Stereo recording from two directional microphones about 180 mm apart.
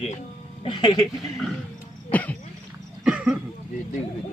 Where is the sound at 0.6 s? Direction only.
25° left (ahead or behind).